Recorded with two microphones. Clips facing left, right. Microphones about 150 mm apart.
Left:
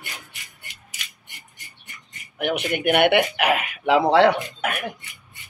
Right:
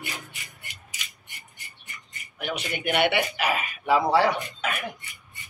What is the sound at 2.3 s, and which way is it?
Speech, 60° left (ahead or behind).